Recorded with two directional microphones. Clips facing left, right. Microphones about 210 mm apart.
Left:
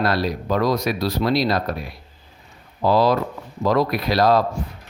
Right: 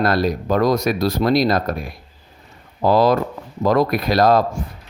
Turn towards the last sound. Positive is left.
turn(degrees=-45)  # may be behind; listen again after turning